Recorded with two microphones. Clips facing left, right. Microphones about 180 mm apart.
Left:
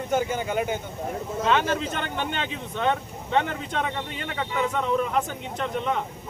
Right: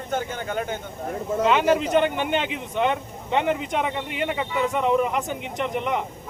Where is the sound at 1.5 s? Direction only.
15° right (ahead or behind).